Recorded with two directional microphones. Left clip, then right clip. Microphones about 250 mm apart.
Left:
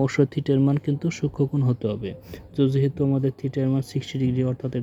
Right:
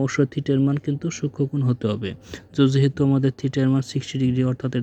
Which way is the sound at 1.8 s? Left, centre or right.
Centre.